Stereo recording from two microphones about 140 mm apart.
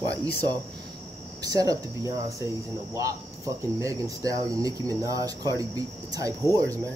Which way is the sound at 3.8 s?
25° right (ahead or behind).